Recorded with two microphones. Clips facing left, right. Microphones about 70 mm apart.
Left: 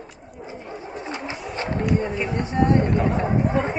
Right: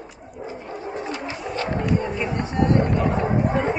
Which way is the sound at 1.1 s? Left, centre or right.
Left.